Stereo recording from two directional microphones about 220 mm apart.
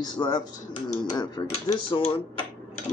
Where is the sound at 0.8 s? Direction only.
20° left (ahead or behind).